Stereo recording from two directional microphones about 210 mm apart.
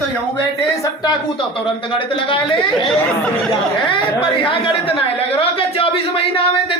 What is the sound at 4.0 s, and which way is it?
A woman's voice, 25° left (ahead or behind).